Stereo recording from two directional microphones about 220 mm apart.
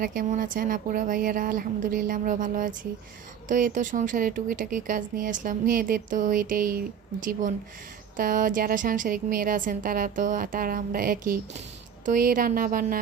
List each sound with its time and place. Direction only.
0.0 s speech: 40° right (ahead or behind)
8.1 s speech: 40° right (ahead or behind)